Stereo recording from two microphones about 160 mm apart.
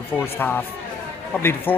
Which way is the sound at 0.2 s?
10° left (ahead or behind).